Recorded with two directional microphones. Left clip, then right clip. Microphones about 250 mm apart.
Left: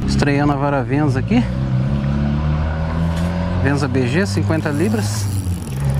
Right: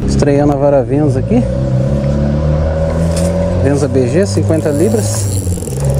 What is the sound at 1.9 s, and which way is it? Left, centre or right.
Vehicle, left.